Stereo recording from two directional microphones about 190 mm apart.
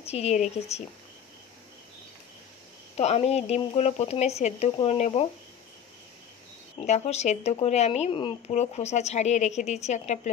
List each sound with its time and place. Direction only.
0.0 s speech: 35° left (ahead or behind)
3.0 s speech: 35° left (ahead or behind)
6.9 s speech: 35° left (ahead or behind)